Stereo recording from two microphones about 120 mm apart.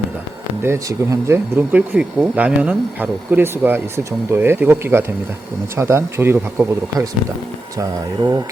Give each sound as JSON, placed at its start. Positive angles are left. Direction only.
{"t": 0.6, "sound": "speech", "side_deg": -25}
{"t": 1.5, "sound": "speech", "side_deg": -15}
{"t": 7.8, "sound": "speech", "side_deg": -35}